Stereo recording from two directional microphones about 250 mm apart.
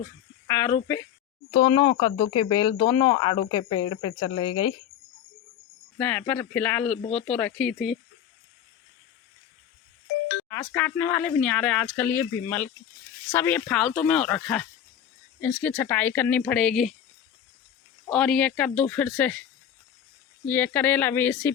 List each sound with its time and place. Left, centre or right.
0.4 s speech: centre
6.0 s speech: centre
7.0 s speech: left
7.3 s speech: centre
10.5 s speech: centre
18.0 s speech: centre
20.4 s speech: centre